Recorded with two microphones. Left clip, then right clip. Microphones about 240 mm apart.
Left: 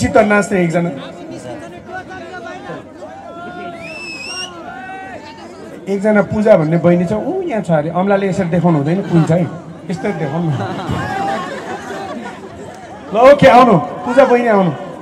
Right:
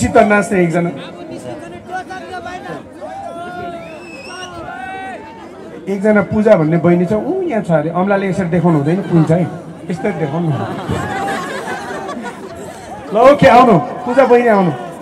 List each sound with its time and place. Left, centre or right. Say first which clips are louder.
0.0 s speech: right 1 dB; left
5.9 s speech: even; left
13.1 s a man's voice: left 1 dB; left